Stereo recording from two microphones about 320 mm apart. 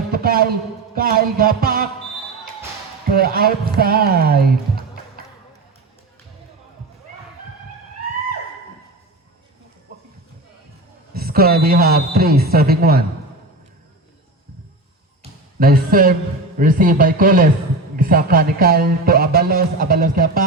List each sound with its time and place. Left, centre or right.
0.1 s a man's voice: right
3.2 s speech: right
11.1 s speech: right
15.2 s a sound: right
16.6 s speech: right